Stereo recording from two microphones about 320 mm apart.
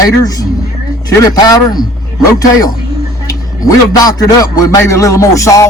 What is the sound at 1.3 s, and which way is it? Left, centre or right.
Speech, centre.